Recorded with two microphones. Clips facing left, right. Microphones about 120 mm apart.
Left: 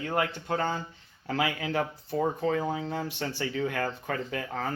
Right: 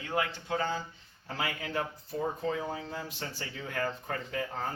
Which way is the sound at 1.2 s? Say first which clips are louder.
Left 6 dB; 90° left.